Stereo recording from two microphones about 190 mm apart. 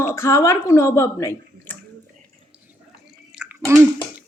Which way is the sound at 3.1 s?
5° right (ahead or behind).